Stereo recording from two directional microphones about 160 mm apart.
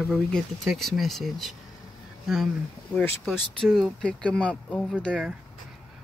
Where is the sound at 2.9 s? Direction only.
10° left (ahead or behind).